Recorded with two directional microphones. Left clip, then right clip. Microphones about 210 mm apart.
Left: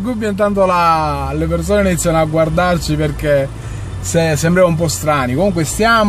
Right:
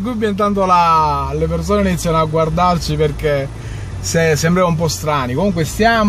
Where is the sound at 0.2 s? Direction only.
15° left (ahead or behind).